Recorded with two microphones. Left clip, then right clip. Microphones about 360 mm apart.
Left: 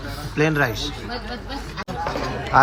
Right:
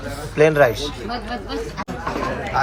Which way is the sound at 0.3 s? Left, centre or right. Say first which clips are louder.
Right 6 dB; centre.